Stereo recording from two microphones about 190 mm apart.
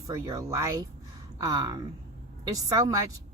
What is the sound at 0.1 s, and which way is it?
A woman's voice, 20° right (ahead or behind).